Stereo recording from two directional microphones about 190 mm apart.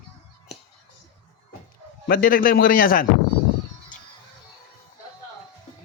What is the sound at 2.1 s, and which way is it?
Speech, 50° left (ahead or behind).